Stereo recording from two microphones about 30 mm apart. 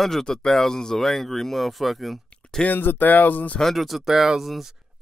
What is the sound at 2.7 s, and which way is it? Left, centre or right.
Speech, left.